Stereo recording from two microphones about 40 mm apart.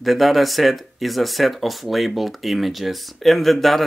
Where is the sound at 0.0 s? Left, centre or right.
Centre.